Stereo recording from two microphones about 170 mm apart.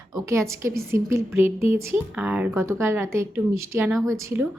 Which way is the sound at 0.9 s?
15° right (ahead or behind).